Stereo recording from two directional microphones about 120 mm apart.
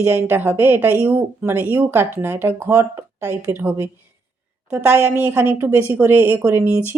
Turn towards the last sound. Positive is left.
turn(degrees=-15)  # may be behind; listen again after turning